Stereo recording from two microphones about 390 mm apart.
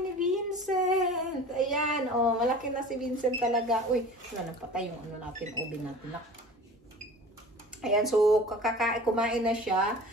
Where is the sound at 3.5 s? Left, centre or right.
Centre.